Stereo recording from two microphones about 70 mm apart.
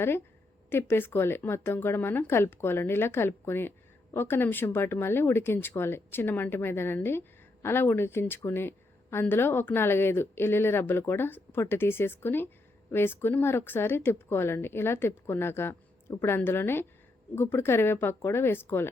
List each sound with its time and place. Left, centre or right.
0.7 s speech: left